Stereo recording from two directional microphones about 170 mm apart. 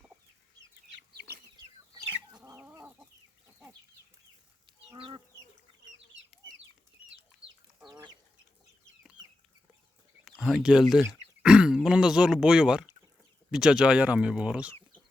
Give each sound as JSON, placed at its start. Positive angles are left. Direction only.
{"t": 1.5, "sound": "chicken", "side_deg": -25}
{"t": 4.9, "sound": "chicken", "side_deg": -30}
{"t": 7.4, "sound": "chicken", "side_deg": -35}
{"t": 10.2, "sound": "speech", "side_deg": 0}